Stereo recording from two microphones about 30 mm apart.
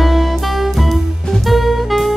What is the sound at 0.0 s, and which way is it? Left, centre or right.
Music, centre.